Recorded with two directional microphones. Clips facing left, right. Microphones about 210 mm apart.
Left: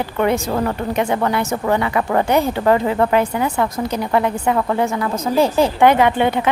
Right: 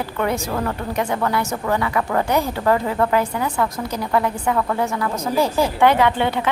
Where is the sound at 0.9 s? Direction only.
20° left (ahead or behind).